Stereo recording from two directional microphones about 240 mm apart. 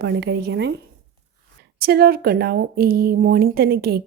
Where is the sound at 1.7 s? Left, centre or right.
Right.